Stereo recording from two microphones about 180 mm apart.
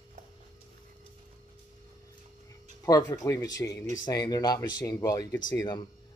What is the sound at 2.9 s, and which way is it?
Speech, 15° left (ahead or behind).